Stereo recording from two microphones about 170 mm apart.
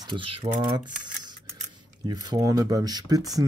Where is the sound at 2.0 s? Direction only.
25° right (ahead or behind).